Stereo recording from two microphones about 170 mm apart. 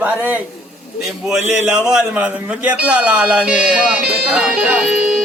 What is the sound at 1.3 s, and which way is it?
Speech, 5° right (ahead or behind).